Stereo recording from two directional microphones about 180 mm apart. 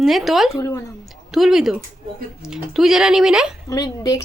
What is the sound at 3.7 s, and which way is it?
Speech, 20° left (ahead or behind).